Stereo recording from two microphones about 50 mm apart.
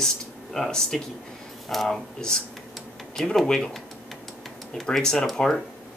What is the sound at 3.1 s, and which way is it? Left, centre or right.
Speech, centre.